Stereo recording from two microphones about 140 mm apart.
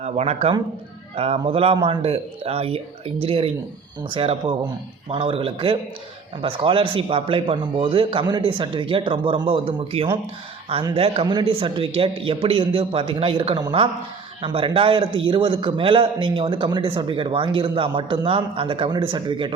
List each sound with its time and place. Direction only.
0.0 s a man's voice: 50° right (ahead or behind)